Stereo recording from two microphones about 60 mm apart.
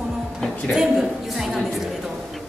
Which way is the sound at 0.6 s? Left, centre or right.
Centre.